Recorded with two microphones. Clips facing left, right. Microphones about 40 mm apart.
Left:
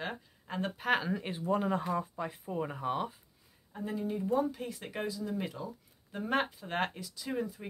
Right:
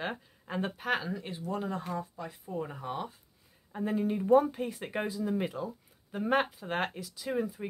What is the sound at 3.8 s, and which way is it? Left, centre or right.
Speech, right.